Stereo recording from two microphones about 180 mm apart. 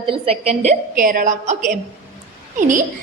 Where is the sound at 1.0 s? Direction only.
50° right (ahead or behind).